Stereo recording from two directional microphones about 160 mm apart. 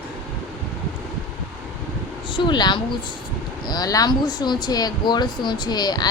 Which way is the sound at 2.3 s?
30° left (ahead or behind).